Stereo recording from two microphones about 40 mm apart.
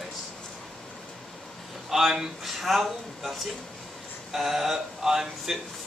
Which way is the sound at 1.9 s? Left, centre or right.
Centre.